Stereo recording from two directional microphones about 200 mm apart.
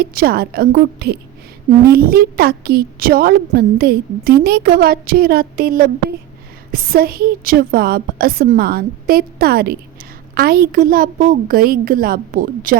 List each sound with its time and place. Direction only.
0.0 s a woman's voice: 50° right (ahead or behind)